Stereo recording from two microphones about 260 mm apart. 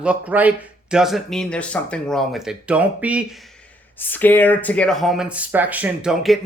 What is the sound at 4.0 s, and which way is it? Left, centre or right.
Speech, centre.